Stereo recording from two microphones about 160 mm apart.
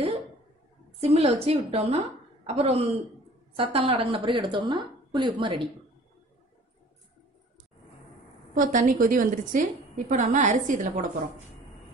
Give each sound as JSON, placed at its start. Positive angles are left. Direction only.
{"t": 1.0, "sound": "a woman's voice", "side_deg": -40}
{"t": 8.5, "sound": "a woman's voice", "side_deg": -50}